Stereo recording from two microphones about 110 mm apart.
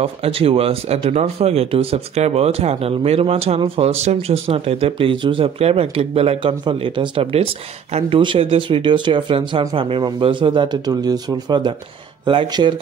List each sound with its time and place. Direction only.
0.0 s speech: 60° right (ahead or behind)
6.6 s speech: 50° right (ahead or behind)
10.9 s speech: 35° right (ahead or behind)